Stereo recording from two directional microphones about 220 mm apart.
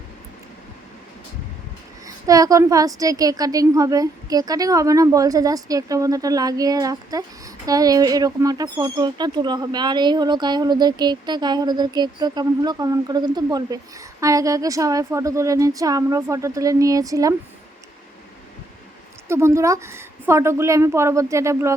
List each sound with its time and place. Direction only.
2.0 s a woman's voice: 15° right (ahead or behind)
19.3 s a woman's voice: 10° right (ahead or behind)